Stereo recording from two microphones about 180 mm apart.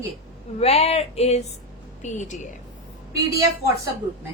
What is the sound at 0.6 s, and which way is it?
A woman's voice, 35° left (ahead or behind).